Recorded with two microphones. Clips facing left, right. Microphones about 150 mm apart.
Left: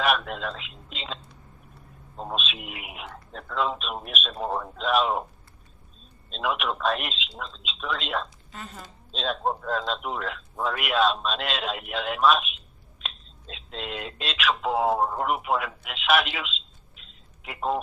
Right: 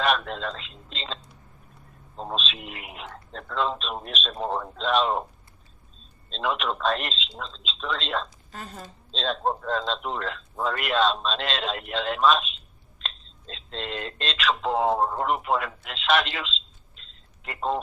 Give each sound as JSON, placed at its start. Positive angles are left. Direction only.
{"t": 0.3, "sound": "speech", "side_deg": 5}
{"t": 6.3, "sound": "speech", "side_deg": 5}
{"t": 8.5, "sound": "a woman's voice", "side_deg": -35}
{"t": 9.1, "sound": "speech", "side_deg": 5}